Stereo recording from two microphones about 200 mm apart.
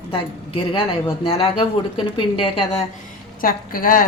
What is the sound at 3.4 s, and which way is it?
Speech, 45° left (ahead or behind).